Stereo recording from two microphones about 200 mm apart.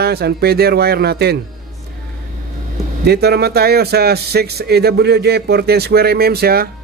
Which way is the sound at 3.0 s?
55° right (ahead or behind).